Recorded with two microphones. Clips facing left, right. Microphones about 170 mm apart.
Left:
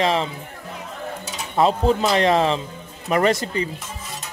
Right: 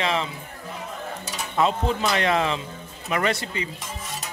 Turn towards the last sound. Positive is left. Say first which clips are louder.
# left 6 dB
turn(degrees=40)  # may be behind; listen again after turning